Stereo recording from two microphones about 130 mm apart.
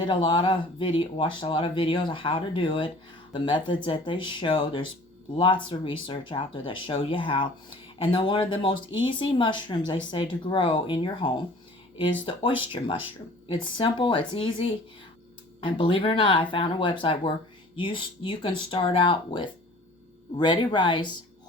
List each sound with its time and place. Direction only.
0.0 s speech: 40° left (ahead or behind)